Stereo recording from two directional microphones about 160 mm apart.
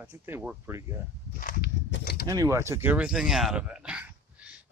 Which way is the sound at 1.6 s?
75° left (ahead or behind).